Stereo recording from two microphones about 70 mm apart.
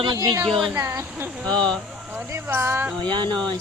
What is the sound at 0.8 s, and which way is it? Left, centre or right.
Speech, right.